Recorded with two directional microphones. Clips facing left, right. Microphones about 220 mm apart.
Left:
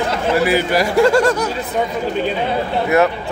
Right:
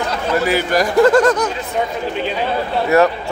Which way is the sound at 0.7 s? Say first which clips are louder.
Right 3 dB; 10° left (ahead or behind).